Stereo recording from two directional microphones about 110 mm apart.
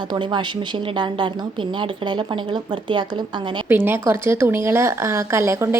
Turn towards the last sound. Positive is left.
turn(degrees=-25)  # may be behind; listen again after turning